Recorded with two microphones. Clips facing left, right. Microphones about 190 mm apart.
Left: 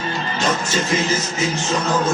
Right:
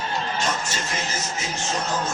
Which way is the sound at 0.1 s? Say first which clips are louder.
Left 5 dB; 90° left.